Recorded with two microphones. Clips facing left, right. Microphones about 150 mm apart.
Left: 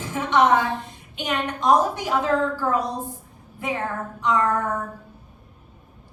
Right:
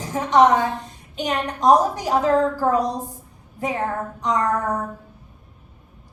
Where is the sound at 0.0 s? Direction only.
40° right (ahead or behind).